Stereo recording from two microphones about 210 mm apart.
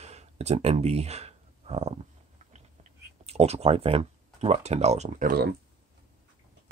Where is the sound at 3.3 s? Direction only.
30° right (ahead or behind).